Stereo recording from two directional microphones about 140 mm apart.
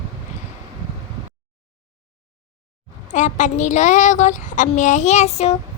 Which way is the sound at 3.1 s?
60° left (ahead or behind).